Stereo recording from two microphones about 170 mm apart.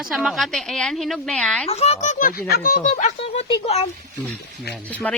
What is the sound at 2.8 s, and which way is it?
Speech, 40° left (ahead or behind).